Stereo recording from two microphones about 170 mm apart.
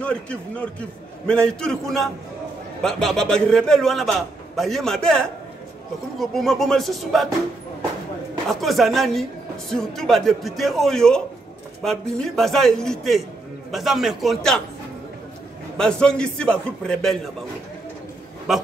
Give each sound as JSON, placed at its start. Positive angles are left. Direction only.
{"t": 0.0, "sound": "a man's voice", "side_deg": 5}
{"t": 8.5, "sound": "a man's voice", "side_deg": 0}
{"t": 15.8, "sound": "a man's voice", "side_deg": 5}